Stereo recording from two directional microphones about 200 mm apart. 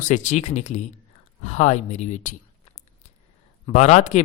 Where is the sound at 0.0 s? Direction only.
35° left (ahead or behind).